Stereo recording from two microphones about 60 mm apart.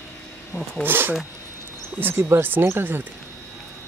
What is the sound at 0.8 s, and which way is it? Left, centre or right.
Speech, right.